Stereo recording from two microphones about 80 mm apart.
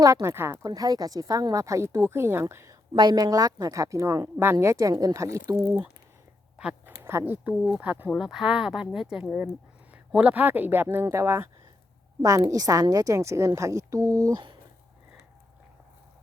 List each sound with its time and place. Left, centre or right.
0.0 s a woman's voice: right
0.6 s a woman's voice: right
2.9 s a woman's voice: right
6.8 s a sound: right
7.5 s speech: centre
7.8 s speech: right
8.1 s a woman's voice: centre; by 11.4 s right
12.2 s a woman's voice: right